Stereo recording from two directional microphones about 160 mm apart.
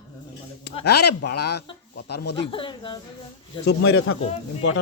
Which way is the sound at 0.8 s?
90° left.